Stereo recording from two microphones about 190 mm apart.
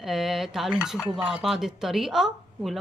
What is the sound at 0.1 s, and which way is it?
Speech, centre (ahead or behind).